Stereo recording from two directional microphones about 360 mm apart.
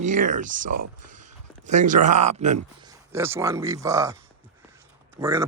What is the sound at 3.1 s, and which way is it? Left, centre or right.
A man's voice, centre.